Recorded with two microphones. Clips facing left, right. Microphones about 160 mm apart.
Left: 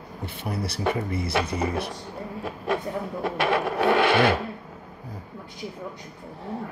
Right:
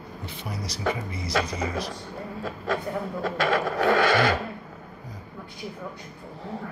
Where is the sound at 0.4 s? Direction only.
60° left (ahead or behind).